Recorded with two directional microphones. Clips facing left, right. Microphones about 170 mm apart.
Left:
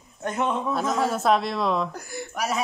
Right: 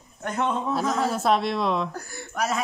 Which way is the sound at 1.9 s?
15° left (ahead or behind).